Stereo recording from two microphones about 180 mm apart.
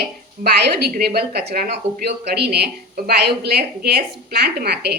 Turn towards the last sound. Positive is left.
turn(degrees=-65)  # may be behind; listen again after turning